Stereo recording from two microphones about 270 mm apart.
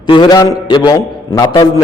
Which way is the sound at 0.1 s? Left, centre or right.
Centre.